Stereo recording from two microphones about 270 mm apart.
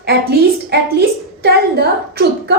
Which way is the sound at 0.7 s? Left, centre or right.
Right.